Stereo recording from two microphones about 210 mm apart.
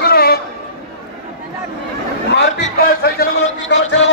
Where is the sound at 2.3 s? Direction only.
50° left (ahead or behind).